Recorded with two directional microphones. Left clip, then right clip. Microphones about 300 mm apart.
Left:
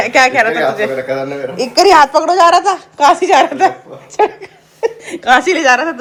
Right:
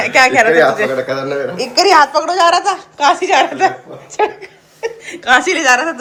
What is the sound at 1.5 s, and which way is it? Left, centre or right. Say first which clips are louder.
Speech: left 2 dB; centre.